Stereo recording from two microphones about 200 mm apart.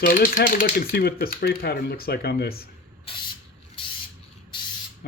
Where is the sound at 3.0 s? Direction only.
25° left (ahead or behind).